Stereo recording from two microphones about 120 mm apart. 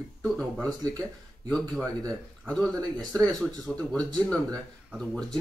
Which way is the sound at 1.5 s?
Centre (ahead or behind).